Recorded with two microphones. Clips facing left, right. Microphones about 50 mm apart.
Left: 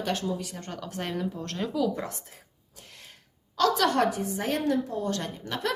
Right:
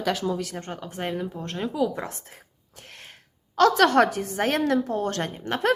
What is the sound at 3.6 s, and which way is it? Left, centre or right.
A woman's voice, right.